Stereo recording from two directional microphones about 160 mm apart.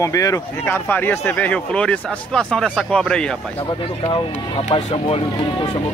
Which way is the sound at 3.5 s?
30° left (ahead or behind).